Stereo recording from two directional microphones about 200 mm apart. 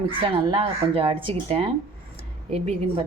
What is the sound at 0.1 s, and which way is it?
Speech, 25° right (ahead or behind).